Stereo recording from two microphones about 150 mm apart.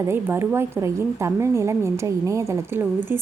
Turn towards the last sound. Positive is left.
turn(degrees=-15)  # may be behind; listen again after turning